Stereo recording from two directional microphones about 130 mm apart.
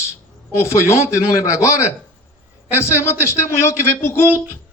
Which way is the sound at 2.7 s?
20° left (ahead or behind).